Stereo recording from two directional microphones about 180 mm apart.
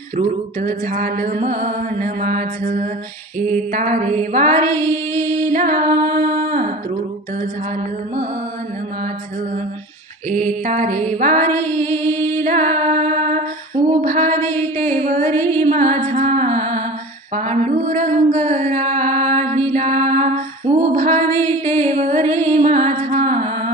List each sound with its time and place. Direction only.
0.2 s music: 45° right (ahead or behind)
4.8 s a sound: 15° left (ahead or behind)
5.5 s music: 45° right (ahead or behind)
10.2 s music: 45° right (ahead or behind)
11.6 s music: 15° left (ahead or behind)
12.5 s music: 45° right (ahead or behind)
14.0 s a sound: 45° right (ahead or behind)
15.6 s music: 45° right (ahead or behind)
19.7 s a sound: 45° right (ahead or behind)
21.8 s music: 40° right (ahead or behind)